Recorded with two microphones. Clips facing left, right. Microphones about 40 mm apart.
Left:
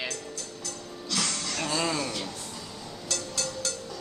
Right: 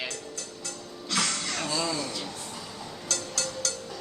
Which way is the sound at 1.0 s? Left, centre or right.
Right.